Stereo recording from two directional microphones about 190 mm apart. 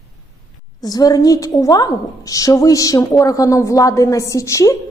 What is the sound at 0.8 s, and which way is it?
A woman's voice, 20° left (ahead or behind).